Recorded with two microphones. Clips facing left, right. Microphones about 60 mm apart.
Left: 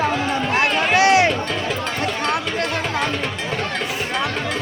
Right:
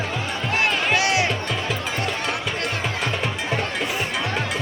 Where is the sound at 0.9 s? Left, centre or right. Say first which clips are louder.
Left 9 dB; left.